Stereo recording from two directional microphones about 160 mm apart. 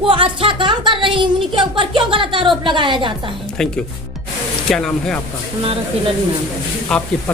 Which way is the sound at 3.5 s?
5° left (ahead or behind).